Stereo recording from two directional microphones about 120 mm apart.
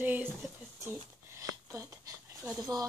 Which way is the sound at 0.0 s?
15° right (ahead or behind).